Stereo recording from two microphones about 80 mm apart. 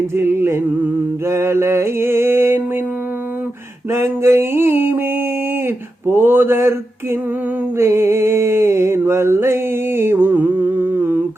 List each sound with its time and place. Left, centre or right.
0.2 s mantra: right
3.9 s mantra: right
5.6 s a sound: right
7.8 s mantra: right